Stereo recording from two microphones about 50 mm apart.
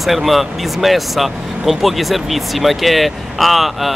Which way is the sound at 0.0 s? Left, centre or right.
Centre.